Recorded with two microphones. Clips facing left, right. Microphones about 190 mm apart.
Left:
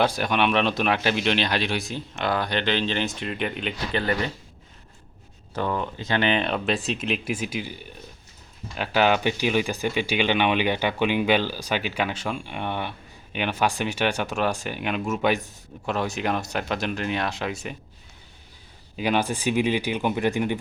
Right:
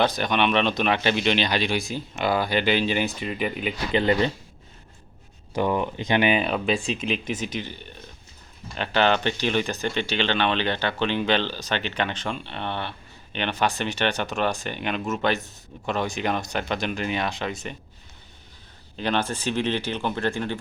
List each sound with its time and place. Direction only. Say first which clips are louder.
0.0 s speech: even; 5° left (ahead or behind)
3.9 s speech: right 5 dB; 20° right (ahead or behind)
5.5 s speech: right 3 dB; 15° right (ahead or behind); by 17.7 s 5° left (ahead or behind)
18.9 s speech: left 2 dB; 10° left (ahead or behind)